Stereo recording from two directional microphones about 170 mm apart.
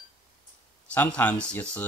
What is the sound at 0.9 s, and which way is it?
Speech, 10° left (ahead or behind).